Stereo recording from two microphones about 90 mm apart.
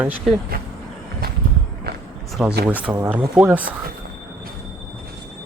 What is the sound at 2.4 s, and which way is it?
Speech, 15° right (ahead or behind).